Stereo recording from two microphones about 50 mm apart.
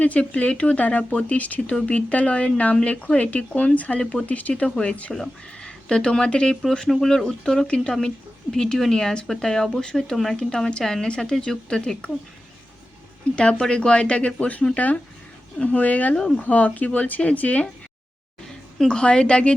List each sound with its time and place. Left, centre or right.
0.0 s speech: left
5.1 s speech: centre
13.3 s speech: centre
16.1 s speech: centre
16.4 s speech: left
18.4 s a woman's voice: centre